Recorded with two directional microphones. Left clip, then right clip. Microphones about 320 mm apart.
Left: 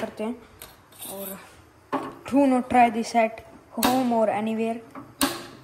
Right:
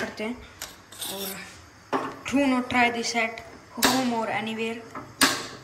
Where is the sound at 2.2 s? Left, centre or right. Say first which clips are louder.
Left 5 dB; centre.